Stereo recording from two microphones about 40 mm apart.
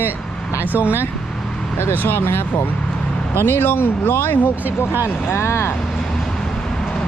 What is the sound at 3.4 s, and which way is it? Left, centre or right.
Speech, left.